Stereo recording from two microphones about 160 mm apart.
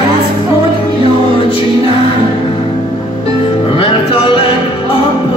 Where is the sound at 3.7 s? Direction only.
35° left (ahead or behind).